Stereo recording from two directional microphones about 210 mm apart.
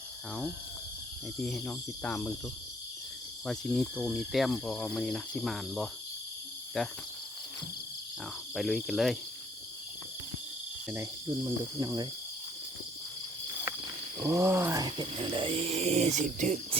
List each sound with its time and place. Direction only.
1.4 s speech: 5° left (ahead or behind)
3.4 s speech: centre (ahead or behind)
8.5 s speech: centre (ahead or behind)
10.8 s cricket: 10° right (ahead or behind)
14.2 s a sound: 15° right (ahead or behind); by 16.6 s 35° right (ahead or behind)